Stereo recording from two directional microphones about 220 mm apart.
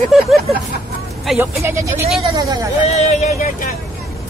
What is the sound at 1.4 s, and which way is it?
Speech, 10° right (ahead or behind).